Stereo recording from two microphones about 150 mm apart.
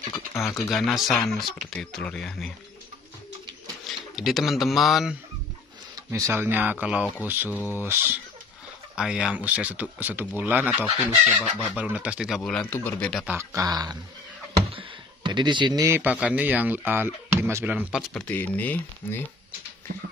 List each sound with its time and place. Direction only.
0.1 s speech: 20° left (ahead or behind)
0.7 s speech: centre (ahead or behind)
3.8 s speech: centre (ahead or behind)
6.1 s speech: 20° right (ahead or behind)
7.5 s speech: 10° left (ahead or behind)
7.8 s speech: 15° right (ahead or behind)
12.4 s speech: 5° left (ahead or behind)
13.3 s speech: 20° right (ahead or behind)
14.7 s a sound: 35° right (ahead or behind)
15.9 s speech: 10° right (ahead or behind)
18.1 s speech: 10° left (ahead or behind)